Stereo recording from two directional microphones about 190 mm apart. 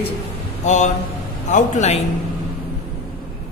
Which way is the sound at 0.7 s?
40° left (ahead or behind).